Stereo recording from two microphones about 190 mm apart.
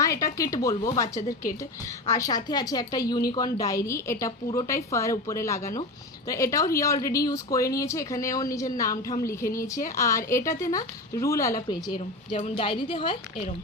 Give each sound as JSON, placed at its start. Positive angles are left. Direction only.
{"t": 0.0, "sound": "a woman's voice", "side_deg": 15}